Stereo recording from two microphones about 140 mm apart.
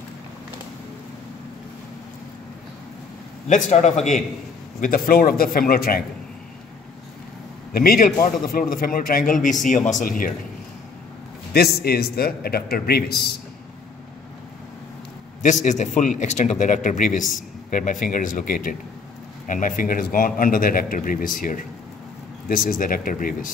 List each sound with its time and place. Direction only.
3.4 s speech: 60° left (ahead or behind)
4.7 s a man's voice: 75° left (ahead or behind)
7.7 s a man's voice: 90° left
11.5 s a man's voice: 90° left
15.4 s a man's voice: 60° left (ahead or behind); by 23.5 s 80° left